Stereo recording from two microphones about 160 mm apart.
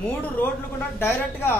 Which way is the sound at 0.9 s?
15° left (ahead or behind).